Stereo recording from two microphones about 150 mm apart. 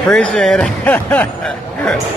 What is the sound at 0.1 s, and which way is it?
Speech, 5° left (ahead or behind).